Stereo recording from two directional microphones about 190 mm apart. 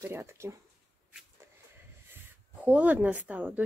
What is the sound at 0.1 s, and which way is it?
Speech, 15° right (ahead or behind).